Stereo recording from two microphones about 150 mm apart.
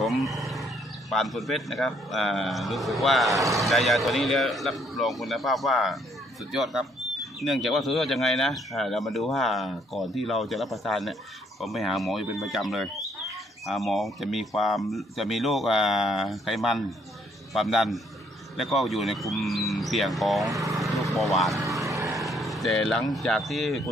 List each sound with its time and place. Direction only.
0.0 s wild animals: centre (ahead or behind)
1.1 s speech: centre (ahead or behind)
20.7 s vehicle: centre (ahead or behind)
21.8 s vehicle: 20° right (ahead or behind)
22.3 s speech: centre (ahead or behind)